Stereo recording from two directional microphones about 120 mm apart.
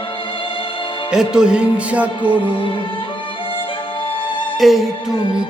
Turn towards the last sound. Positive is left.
turn(degrees=-5)  # may be behind; listen again after turning